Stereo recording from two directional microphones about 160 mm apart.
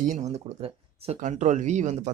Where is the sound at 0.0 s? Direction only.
50° right (ahead or behind).